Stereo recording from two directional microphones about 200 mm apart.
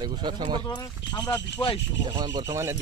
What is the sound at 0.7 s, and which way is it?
Speech, 20° left (ahead or behind).